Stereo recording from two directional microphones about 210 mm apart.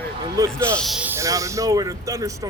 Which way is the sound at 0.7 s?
Centre (ahead or behind).